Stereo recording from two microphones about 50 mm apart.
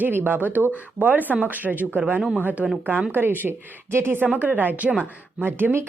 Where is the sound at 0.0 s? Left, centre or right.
Right.